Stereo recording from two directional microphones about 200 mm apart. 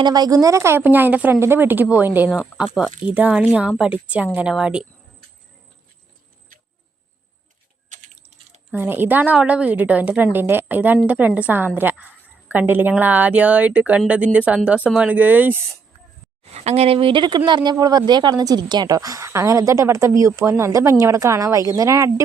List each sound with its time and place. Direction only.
0.0 s a woman's voice: 20° right (ahead or behind); by 4.9 s 5° right (ahead or behind)
7.9 s a sound: 35° right (ahead or behind)
8.7 s a woman's voice: 10° right (ahead or behind)
16.4 s a woman's voice: 30° right (ahead or behind); by 22.1 s 15° right (ahead or behind)